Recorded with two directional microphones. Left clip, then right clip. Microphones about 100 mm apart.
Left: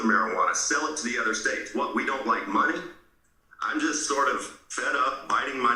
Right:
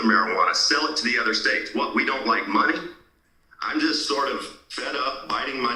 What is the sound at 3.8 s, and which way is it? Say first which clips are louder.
A man's voice: right 3 dB; 35° right (ahead or behind).